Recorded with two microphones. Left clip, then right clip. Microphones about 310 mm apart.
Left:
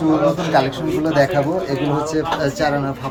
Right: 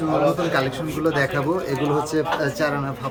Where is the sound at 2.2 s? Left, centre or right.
Centre.